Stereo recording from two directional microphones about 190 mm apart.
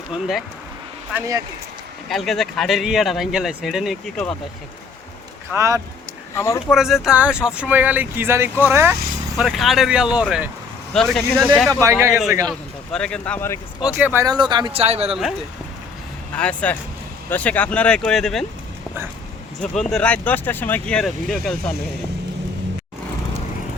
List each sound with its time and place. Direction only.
0.1 s speech: centre (ahead or behind)
2.0 s speech: centre (ahead or behind)
5.5 s speech: 15° right (ahead or behind)
6.3 s speech: 15° left (ahead or behind)
6.7 s speech: centre (ahead or behind)
9.4 s speech: centre (ahead or behind)
11.7 s speech: 15° right (ahead or behind)
12.5 s speech: 5° left (ahead or behind)
13.8 s speech: 10° right (ahead or behind); by 15.1 s 30° right (ahead or behind)
16.3 s speech: 5° left (ahead or behind)
19.7 s speech: 5° left (ahead or behind)